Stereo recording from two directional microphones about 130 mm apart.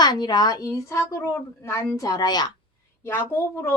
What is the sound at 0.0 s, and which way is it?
A woman's voice, 30° left (ahead or behind).